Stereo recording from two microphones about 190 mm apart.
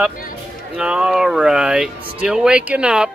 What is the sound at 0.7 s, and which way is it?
Speech, 5° right (ahead or behind).